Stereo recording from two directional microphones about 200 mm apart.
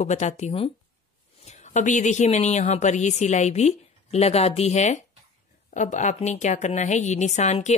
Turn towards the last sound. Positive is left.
turn(degrees=35)  # may be behind; listen again after turning